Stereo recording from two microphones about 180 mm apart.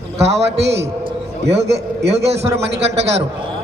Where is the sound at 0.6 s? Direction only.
70° right (ahead or behind).